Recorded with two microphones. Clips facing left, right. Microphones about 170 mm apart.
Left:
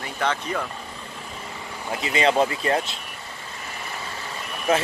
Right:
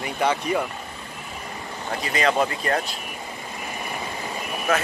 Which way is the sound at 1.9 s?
25° left (ahead or behind).